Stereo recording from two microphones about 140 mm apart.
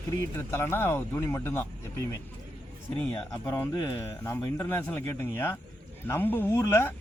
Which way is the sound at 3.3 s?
15° left (ahead or behind).